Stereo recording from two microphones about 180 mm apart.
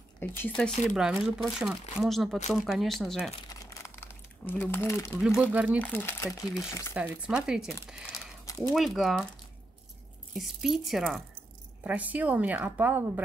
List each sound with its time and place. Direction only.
0.2 s speech: 5° left (ahead or behind)
3.4 s crumpling: 15° left (ahead or behind)
5.2 s a woman's voice: 5° right (ahead or behind)
5.8 s speech: 10° left (ahead or behind)
6.9 s speech: 5° right (ahead or behind)
10.3 s a woman's voice: centre (ahead or behind)